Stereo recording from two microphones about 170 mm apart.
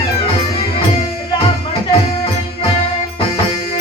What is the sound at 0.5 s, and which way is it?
Music, 35° left (ahead or behind).